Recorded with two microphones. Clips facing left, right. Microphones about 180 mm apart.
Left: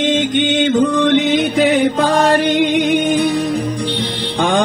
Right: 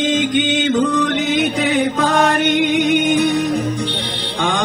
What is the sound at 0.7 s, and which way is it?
Mantra, 25° left (ahead or behind).